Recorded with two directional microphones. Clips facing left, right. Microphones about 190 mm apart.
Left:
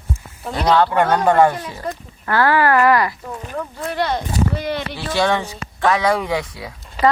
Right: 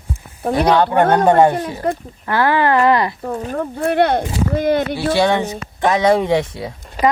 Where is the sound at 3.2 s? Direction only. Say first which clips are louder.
Right 6 dB; 45° right (ahead or behind).